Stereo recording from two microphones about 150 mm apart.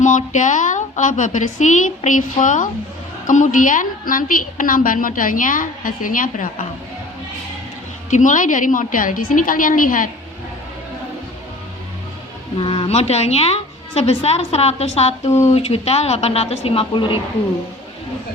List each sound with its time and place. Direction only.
0.0 s a woman's voice: 55° left (ahead or behind)
8.1 s a woman's voice: 60° left (ahead or behind)
12.5 s a woman's voice: 35° left (ahead or behind)